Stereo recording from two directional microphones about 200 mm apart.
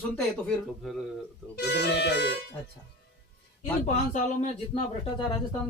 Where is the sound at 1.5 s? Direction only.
60° left (ahead or behind).